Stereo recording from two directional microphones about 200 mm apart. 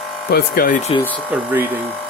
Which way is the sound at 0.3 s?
50° left (ahead or behind).